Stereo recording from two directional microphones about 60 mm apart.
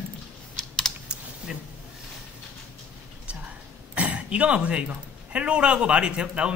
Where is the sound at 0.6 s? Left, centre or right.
Centre.